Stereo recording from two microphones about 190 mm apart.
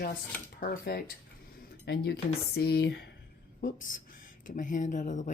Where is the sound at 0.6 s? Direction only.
50° left (ahead or behind).